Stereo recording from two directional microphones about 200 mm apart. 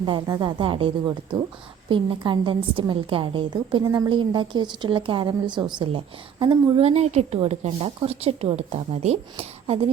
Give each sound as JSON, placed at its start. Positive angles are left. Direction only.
{"t": 0.0, "sound": "a woman's voice", "side_deg": -20}